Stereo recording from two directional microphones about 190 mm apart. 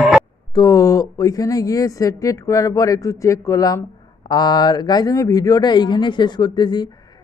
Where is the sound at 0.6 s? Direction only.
20° left (ahead or behind).